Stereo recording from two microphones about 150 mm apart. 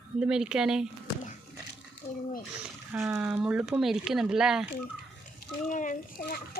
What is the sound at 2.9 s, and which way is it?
Speech, 15° right (ahead or behind).